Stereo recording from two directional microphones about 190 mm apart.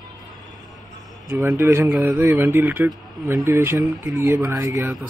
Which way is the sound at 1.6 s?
10° right (ahead or behind).